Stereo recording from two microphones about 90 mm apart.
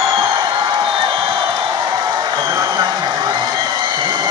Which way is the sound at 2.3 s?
50° right (ahead or behind).